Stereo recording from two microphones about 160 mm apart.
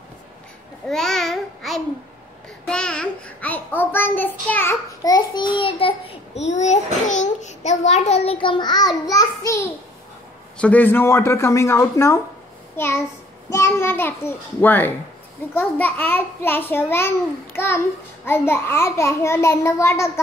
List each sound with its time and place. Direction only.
0.8 s babbling: centre (ahead or behind)
2.6 s a child's voice: 5° left (ahead or behind); by 6.1 s 35° left (ahead or behind)
6.5 s a child's voice: 45° left (ahead or behind); by 9.7 s 20° left (ahead or behind)
10.6 s a child's voice: 10° left (ahead or behind)